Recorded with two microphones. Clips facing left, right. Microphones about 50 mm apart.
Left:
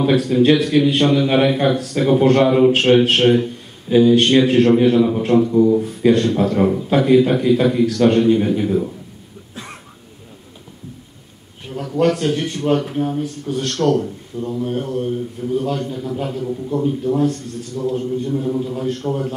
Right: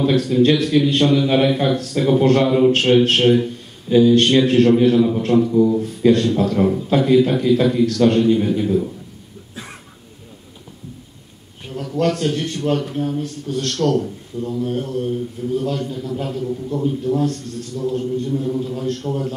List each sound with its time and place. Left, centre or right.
0.0 s speech: centre
11.6 s speech: centre